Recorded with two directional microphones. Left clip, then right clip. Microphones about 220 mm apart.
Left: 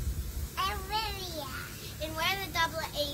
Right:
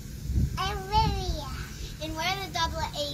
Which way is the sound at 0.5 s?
10° left (ahead or behind).